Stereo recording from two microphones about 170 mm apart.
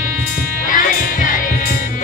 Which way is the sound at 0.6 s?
50° left (ahead or behind).